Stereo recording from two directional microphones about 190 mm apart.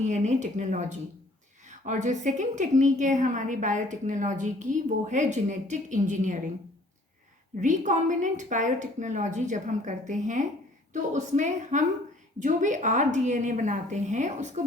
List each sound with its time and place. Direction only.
0.0 s a woman's voice: 40° right (ahead or behind)
7.6 s a woman's voice: 40° right (ahead or behind)